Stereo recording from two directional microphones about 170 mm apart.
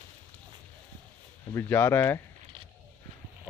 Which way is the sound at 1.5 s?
15° left (ahead or behind).